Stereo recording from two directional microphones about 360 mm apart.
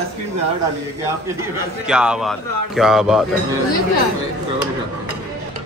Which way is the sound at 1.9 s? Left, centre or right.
Centre.